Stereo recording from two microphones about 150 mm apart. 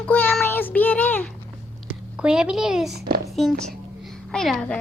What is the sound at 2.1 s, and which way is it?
A woman's voice, 5° right (ahead or behind).